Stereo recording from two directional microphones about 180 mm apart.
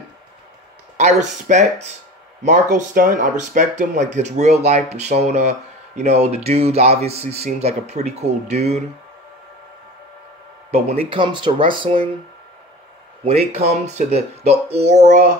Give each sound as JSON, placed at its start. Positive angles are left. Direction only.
{"t": 1.5, "sound": "speech", "side_deg": -40}
{"t": 10.7, "sound": "speech", "side_deg": -35}
{"t": 13.2, "sound": "speech", "side_deg": -35}